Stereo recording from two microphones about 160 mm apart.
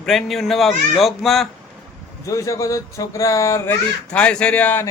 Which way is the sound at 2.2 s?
20° left (ahead or behind).